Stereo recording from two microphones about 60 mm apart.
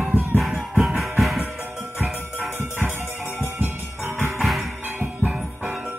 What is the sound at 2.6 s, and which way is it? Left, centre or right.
Music, right.